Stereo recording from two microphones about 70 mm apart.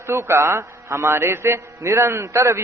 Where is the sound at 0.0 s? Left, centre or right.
Right.